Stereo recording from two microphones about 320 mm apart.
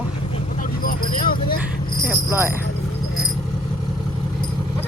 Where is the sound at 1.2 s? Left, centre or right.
Left.